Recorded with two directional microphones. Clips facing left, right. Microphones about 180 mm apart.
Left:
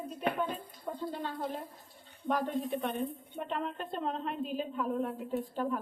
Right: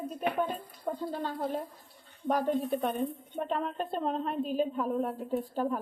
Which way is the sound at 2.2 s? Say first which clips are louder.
Right 4 dB; 40° right (ahead or behind).